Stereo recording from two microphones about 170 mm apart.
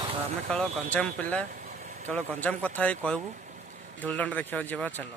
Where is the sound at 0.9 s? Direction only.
5° left (ahead or behind).